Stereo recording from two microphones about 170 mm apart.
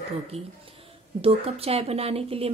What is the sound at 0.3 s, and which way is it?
A woman's voice, 35° right (ahead or behind).